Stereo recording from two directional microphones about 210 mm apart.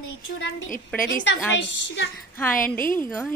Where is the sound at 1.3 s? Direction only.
60° left (ahead or behind).